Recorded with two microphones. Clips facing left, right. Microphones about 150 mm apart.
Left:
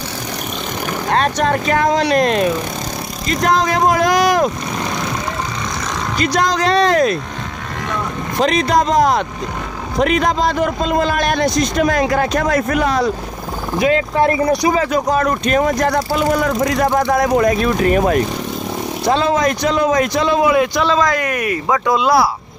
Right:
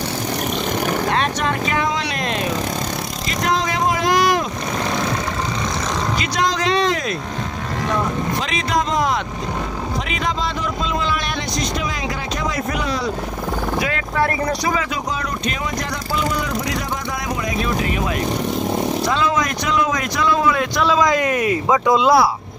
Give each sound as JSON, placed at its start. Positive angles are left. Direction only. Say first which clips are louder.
{"t": 1.1, "sound": "speech", "louder": "left 5 dB", "side_deg": 40}
{"t": 3.3, "sound": "vehicle", "louder": "left 6 dB", "side_deg": 45}
{"t": 6.1, "sound": "speech", "louder": "left 8 dB", "side_deg": 40}
{"t": 8.4, "sound": "a man's voice", "louder": "left 12 dB", "side_deg": 40}
{"t": 13.7, "sound": "speech", "louder": "left 9 dB", "side_deg": 25}
{"t": 14.8, "sound": "a man's voice", "louder": "left 8 dB", "side_deg": 45}
{"t": 19.0, "sound": "speech", "louder": "left 4 dB", "side_deg": 30}
{"t": 20.4, "sound": "a man's voice", "louder": "left 5 dB", "side_deg": 10}
{"t": 21.0, "sound": "speech", "louder": "even", "side_deg": -20}